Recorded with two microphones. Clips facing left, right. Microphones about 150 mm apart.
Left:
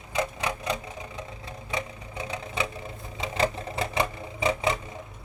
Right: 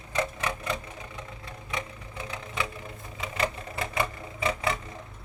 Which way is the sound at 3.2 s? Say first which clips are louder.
Left 4 dB; 30° left (ahead or behind).